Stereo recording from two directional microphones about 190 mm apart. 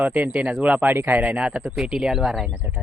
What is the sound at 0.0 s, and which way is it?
Speech, 5° right (ahead or behind).